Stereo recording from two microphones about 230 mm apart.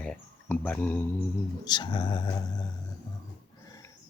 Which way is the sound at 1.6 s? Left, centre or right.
Centre.